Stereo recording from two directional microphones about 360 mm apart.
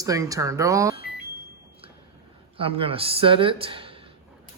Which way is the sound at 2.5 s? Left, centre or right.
Centre.